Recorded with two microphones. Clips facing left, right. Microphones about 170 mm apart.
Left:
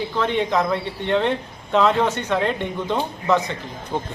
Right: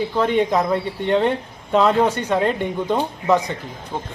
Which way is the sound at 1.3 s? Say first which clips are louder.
Right 1 dB; 10° right (ahead or behind).